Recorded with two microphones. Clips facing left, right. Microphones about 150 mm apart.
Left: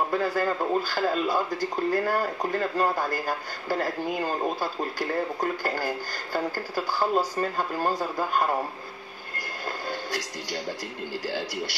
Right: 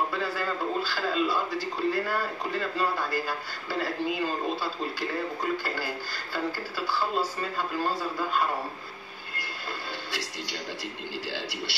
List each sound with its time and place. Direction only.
0.1 s a man's voice: 45° left (ahead or behind)
11.2 s a man's voice: 45° left (ahead or behind)